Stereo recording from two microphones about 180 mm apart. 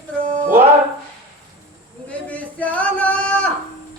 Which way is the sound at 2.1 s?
10° left (ahead or behind).